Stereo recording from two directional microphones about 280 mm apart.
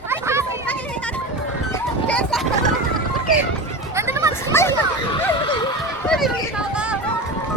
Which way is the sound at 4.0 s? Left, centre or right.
Centre.